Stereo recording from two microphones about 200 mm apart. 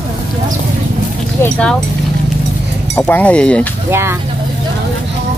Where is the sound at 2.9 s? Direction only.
10° left (ahead or behind).